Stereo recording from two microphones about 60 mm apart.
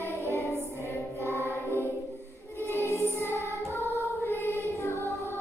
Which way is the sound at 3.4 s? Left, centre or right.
Right.